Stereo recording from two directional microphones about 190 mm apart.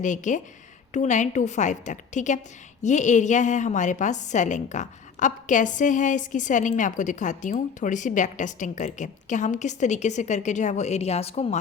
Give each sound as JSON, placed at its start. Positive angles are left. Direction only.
{"t": 0.0, "sound": "a woman's voice", "side_deg": 40}